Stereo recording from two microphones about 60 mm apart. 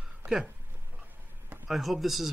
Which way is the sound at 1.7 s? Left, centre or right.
Centre.